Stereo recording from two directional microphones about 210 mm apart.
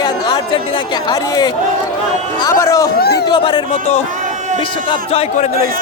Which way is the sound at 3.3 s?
20° left (ahead or behind).